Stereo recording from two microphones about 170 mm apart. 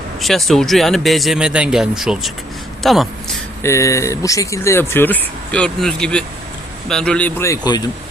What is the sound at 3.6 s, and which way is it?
Speech, 15° left (ahead or behind).